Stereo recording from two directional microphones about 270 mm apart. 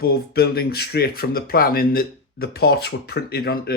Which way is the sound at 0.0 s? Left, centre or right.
Left.